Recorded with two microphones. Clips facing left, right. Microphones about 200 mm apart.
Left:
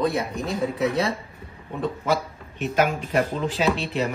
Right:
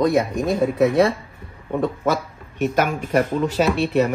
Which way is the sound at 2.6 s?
50° right (ahead or behind).